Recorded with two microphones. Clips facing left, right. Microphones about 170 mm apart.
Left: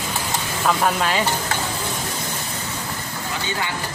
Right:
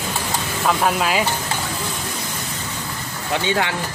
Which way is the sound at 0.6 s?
5° right (ahead or behind).